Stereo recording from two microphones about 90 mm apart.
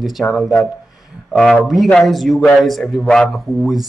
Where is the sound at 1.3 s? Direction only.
Centre (ahead or behind).